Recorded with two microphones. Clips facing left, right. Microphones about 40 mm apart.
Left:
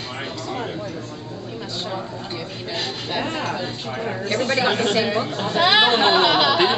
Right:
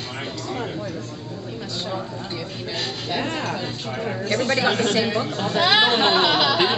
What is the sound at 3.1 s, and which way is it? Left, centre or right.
A man's voice, centre.